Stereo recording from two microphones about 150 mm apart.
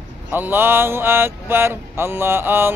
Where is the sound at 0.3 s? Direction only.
15° right (ahead or behind).